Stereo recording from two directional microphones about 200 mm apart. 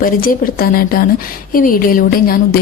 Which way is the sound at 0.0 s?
45° left (ahead or behind).